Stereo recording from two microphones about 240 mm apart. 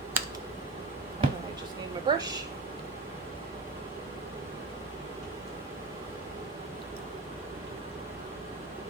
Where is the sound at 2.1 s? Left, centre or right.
Centre.